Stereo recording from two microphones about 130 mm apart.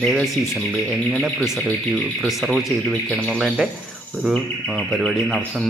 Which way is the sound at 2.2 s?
Centre (ahead or behind).